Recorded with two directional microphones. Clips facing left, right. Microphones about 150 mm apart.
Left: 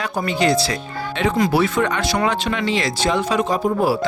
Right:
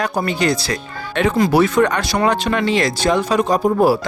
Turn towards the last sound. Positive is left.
turn(degrees=-40)  # may be behind; listen again after turning